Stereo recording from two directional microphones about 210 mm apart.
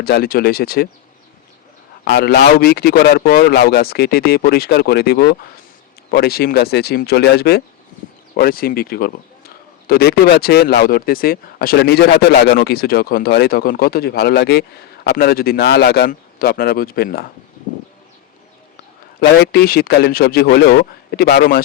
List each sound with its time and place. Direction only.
0.0 s speech: 45° left (ahead or behind)
2.1 s speech: 50° left (ahead or behind)
19.2 s speech: 50° left (ahead or behind)